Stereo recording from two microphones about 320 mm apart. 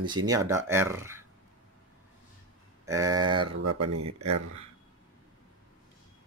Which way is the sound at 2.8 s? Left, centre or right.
Centre.